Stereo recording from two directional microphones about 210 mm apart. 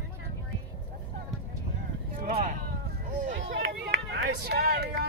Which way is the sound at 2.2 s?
35° right (ahead or behind).